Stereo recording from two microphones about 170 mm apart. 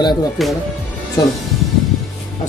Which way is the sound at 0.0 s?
25° left (ahead or behind).